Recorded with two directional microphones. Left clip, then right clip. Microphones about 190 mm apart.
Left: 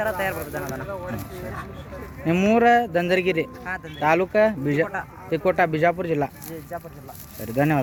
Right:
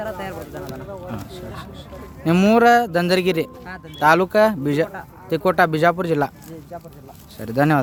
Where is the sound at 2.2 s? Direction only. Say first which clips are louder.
Right 4 dB; 20° right (ahead or behind).